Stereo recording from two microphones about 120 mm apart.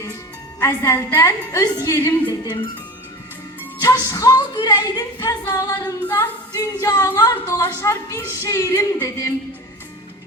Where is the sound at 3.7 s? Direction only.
30° left (ahead or behind).